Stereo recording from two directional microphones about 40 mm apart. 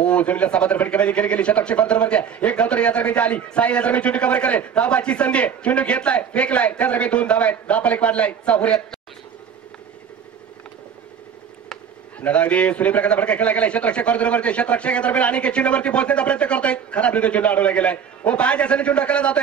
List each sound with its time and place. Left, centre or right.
0.0 s a man's voice: left
12.2 s a man's voice: left